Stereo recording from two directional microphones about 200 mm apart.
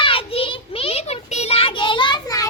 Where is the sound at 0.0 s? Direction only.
25° left (ahead or behind).